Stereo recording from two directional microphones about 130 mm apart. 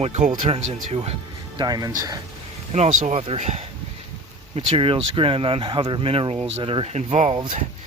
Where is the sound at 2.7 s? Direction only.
60° right (ahead or behind).